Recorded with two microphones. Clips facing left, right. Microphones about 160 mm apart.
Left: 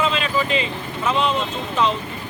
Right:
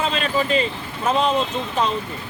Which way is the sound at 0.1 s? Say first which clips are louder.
Right 1 dB; 40° right (ahead or behind).